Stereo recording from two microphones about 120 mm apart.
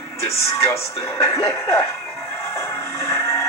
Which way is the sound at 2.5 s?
25° left (ahead or behind).